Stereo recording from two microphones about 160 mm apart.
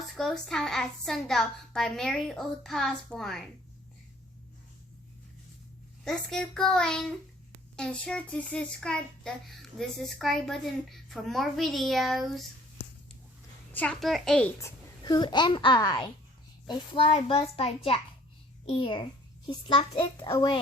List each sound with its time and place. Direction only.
0.2 s a child's voice: centre (ahead or behind)
6.1 s a child's voice: 5° left (ahead or behind)
13.7 s a child's voice: 5° left (ahead or behind)
14.6 s a child's voice: 25° left (ahead or behind)